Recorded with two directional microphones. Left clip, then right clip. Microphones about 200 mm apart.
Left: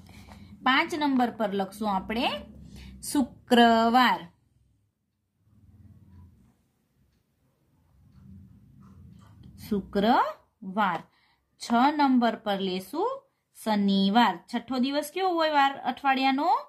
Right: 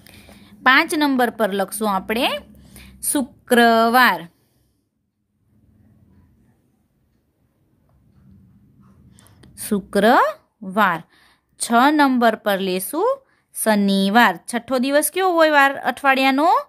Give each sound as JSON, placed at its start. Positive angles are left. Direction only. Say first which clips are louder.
{"t": 0.0, "sound": "a woman's voice", "louder": "right 6 dB", "side_deg": -55}
{"t": 9.7, "sound": "speech", "louder": "right 9 dB", "side_deg": -60}